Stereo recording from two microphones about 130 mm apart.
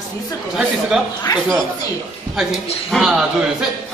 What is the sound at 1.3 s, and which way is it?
Speech, 30° left (ahead or behind).